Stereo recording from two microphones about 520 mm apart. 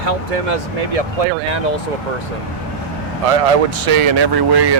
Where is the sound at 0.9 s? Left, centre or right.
Right.